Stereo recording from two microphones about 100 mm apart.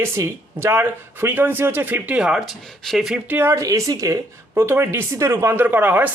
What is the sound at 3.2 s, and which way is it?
Speech, 20° right (ahead or behind).